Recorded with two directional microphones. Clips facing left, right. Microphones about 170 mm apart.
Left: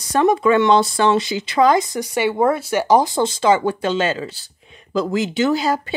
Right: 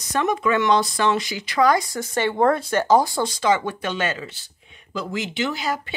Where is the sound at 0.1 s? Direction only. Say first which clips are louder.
Left 6 dB; 30° left (ahead or behind).